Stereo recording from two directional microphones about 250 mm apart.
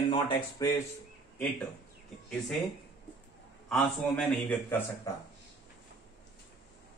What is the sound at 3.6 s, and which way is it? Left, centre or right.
A man's voice, centre.